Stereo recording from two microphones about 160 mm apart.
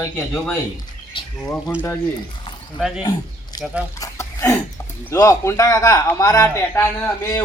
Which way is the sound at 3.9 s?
20° left (ahead or behind).